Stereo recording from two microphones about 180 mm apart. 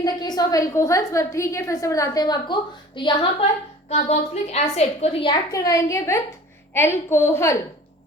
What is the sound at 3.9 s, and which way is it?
A woman's voice, 40° left (ahead or behind).